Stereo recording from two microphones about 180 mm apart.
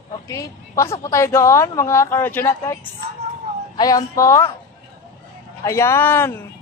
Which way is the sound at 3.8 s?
20° left (ahead or behind).